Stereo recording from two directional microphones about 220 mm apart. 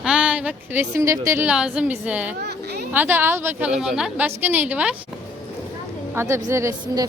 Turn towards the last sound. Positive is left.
turn(degrees=-15)  # may be behind; listen again after turning